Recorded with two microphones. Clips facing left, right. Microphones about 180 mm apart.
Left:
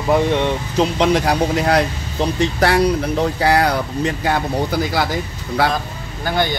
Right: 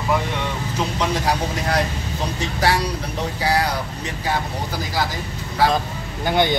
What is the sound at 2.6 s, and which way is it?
Speech, 55° left (ahead or behind).